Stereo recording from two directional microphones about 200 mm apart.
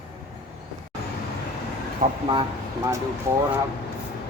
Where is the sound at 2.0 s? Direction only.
40° right (ahead or behind).